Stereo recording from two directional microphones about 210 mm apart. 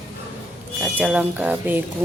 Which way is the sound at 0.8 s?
5° right (ahead or behind).